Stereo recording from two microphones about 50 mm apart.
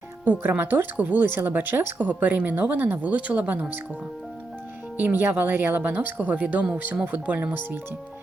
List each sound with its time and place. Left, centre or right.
0.3 s speech: right
4.9 s speech: right